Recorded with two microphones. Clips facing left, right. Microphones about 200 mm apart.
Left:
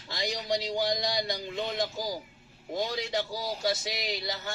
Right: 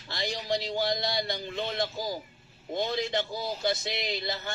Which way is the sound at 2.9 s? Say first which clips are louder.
Right 2 dB; 10° left (ahead or behind).